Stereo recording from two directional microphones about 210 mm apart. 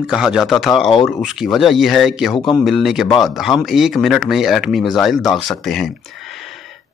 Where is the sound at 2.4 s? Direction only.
20° left (ahead or behind).